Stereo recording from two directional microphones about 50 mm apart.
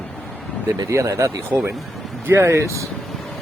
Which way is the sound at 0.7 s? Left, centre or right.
Right.